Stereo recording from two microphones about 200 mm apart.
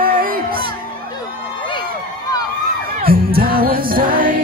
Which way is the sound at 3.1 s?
45° right (ahead or behind).